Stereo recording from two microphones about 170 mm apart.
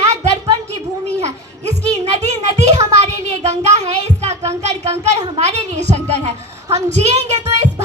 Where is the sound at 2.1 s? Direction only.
40° right (ahead or behind).